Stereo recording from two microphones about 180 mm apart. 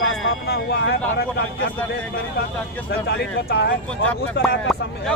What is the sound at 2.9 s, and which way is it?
Speech, 65° left (ahead or behind).